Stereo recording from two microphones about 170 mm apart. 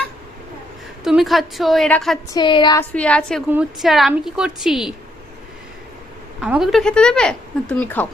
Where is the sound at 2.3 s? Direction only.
30° left (ahead or behind).